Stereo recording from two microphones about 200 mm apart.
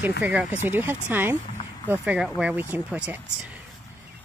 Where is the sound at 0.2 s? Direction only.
5° right (ahead or behind).